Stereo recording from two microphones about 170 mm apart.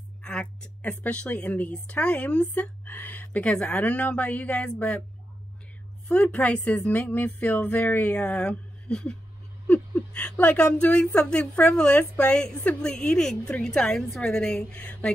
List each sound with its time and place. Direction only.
0.2 s a woman's voice: 5° left (ahead or behind)
6.0 s a woman's voice: 5° left (ahead or behind)